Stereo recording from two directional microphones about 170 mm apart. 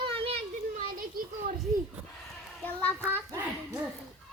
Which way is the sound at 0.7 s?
55° right (ahead or behind).